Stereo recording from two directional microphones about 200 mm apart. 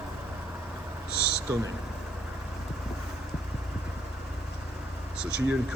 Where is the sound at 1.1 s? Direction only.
50° left (ahead or behind).